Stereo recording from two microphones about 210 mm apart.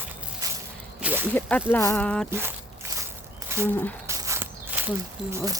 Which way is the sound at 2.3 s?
10° right (ahead or behind).